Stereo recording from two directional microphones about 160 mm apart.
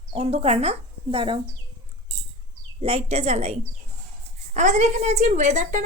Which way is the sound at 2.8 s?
40° right (ahead or behind).